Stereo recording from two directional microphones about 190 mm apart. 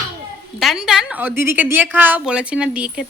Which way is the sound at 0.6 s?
Centre (ahead or behind).